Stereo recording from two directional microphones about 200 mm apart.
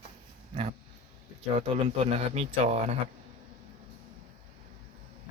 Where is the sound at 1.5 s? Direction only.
30° right (ahead or behind).